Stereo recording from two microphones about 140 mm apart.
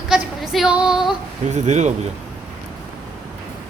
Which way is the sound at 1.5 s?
55° right (ahead or behind).